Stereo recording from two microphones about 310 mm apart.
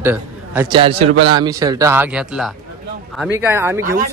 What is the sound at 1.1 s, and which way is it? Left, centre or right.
Speech, right.